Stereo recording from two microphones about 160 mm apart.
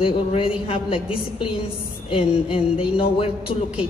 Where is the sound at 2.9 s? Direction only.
35° left (ahead or behind).